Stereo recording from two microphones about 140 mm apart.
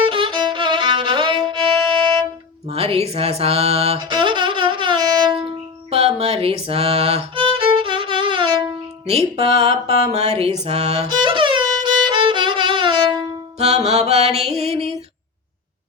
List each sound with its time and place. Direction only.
0.0 s violin: 35° right (ahead or behind)
2.6 s music: 45° right (ahead or behind)
5.4 s music: 45° right (ahead or behind)
9.0 s music: 45° right (ahead or behind)
13.6 s music: 50° right (ahead or behind)